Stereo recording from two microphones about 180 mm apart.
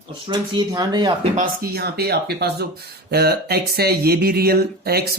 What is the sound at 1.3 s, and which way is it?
Speech, 60° right (ahead or behind).